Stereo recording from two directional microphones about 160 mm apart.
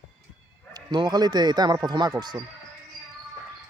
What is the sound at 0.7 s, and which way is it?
Speech, 25° right (ahead or behind).